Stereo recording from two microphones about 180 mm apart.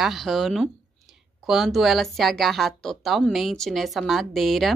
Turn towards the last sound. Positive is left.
turn(degrees=0)  # may be behind; listen again after turning